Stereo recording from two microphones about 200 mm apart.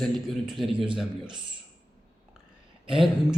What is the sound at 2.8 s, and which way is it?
Speech, centre (ahead or behind).